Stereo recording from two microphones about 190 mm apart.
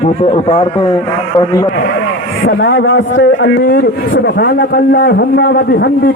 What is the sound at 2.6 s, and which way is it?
A man's voice, 70° left (ahead or behind).